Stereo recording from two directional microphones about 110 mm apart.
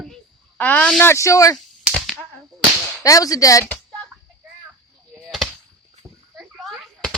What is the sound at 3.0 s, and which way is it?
Speech, 30° left (ahead or behind).